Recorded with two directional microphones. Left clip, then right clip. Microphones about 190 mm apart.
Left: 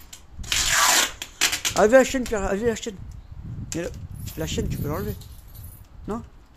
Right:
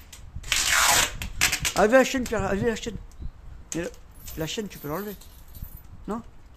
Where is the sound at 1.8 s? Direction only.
Centre (ahead or behind).